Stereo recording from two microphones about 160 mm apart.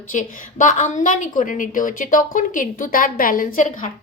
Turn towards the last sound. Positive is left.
turn(degrees=55)  # may be behind; listen again after turning